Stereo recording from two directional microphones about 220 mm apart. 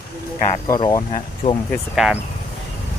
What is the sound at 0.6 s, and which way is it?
Speech, 15° left (ahead or behind).